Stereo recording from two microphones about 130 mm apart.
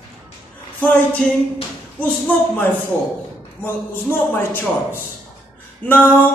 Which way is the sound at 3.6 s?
15° left (ahead or behind).